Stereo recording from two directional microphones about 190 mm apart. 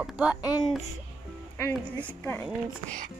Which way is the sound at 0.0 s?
5° right (ahead or behind).